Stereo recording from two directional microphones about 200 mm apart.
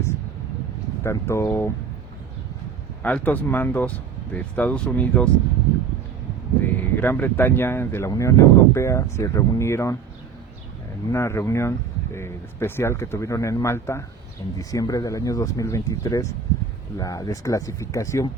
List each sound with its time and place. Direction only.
1.0 s speech: 15° left (ahead or behind)
3.0 s speech: 10° left (ahead or behind)
6.6 s speech: 10° left (ahead or behind)
11.1 s speech: 15° left (ahead or behind)